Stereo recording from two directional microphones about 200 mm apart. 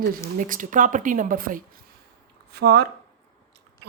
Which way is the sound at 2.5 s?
55° right (ahead or behind).